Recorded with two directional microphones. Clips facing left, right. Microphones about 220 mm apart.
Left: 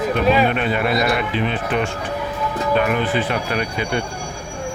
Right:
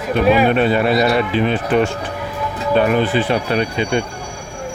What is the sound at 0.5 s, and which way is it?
Speech, 35° right (ahead or behind).